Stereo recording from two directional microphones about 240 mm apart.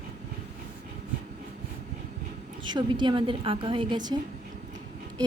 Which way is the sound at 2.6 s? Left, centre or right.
Centre.